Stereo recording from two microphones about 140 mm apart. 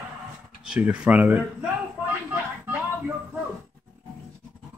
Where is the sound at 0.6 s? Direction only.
10° right (ahead or behind).